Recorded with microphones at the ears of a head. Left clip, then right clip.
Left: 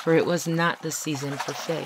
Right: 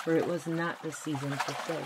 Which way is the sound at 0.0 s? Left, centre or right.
Left.